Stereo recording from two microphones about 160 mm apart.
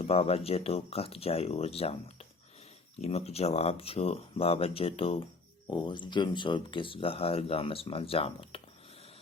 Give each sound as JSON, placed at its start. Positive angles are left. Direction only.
{"t": 0.0, "sound": "speech", "side_deg": 40}